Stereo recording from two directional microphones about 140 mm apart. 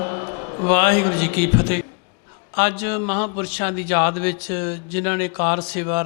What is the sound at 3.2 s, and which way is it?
Speech, 30° left (ahead or behind).